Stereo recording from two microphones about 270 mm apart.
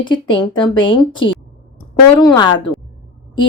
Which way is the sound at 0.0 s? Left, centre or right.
Centre.